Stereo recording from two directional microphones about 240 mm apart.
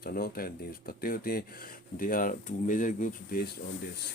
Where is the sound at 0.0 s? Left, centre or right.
Left.